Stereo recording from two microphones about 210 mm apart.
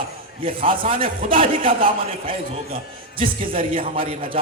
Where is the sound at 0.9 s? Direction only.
40° right (ahead or behind).